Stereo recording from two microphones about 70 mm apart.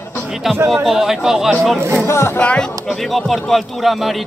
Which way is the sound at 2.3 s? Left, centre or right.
Centre.